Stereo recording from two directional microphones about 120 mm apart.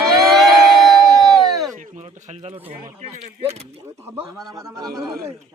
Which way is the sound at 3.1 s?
60° right (ahead or behind).